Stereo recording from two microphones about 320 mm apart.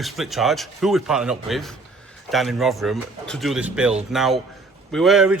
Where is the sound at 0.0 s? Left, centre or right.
Centre.